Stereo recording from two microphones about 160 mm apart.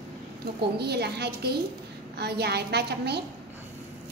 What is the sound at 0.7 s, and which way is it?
A woman's voice, 90° right.